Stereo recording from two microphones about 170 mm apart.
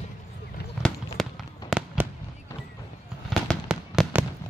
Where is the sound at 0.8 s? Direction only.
Centre (ahead or behind).